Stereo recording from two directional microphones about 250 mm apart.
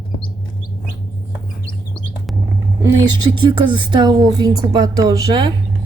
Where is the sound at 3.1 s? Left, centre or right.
Centre.